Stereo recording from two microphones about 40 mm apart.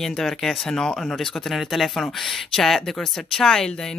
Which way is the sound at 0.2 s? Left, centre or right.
Centre.